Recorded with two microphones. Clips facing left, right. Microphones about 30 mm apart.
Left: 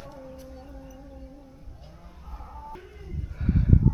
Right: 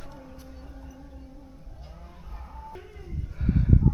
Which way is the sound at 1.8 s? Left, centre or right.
Centre.